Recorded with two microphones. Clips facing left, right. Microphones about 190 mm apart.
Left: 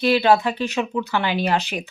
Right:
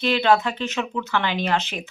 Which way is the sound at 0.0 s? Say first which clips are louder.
Left 2 dB; 10° left (ahead or behind).